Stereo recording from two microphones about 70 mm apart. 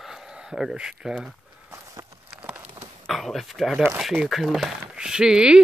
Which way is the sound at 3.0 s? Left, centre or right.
Centre.